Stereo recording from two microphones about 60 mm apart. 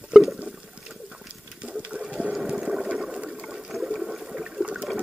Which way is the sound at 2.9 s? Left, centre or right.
Centre.